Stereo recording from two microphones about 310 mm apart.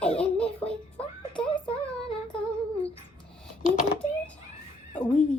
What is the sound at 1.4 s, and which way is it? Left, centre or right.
Child singing, centre.